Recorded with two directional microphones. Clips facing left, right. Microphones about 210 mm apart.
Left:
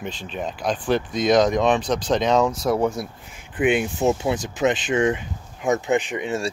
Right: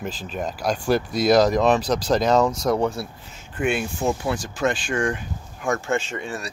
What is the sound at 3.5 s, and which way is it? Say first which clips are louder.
Speech: left 4 dB; 20° left (ahead or behind).